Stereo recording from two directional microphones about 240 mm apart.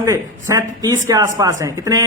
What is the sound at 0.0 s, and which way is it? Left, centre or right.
Speech, centre.